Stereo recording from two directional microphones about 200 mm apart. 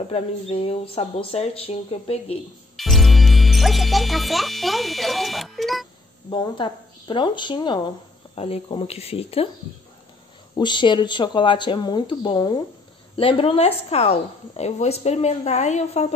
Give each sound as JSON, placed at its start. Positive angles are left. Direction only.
{"t": 0.1, "sound": "speech", "side_deg": 30}
{"t": 2.8, "sound": "speech", "side_deg": 0}
{"t": 6.3, "sound": "speech", "side_deg": 25}
{"t": 10.5, "sound": "a woman's voice", "side_deg": 25}